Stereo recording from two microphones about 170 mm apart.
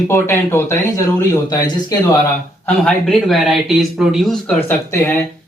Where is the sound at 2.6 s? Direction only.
5° left (ahead or behind).